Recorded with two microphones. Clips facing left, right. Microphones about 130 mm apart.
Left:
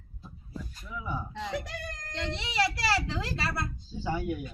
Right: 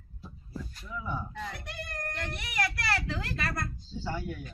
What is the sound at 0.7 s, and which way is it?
Speech, 10° left (ahead or behind).